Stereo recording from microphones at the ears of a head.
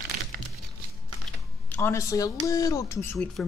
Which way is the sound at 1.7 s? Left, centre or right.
Left.